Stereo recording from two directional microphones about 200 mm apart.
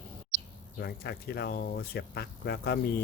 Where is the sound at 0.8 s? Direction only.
50° left (ahead or behind).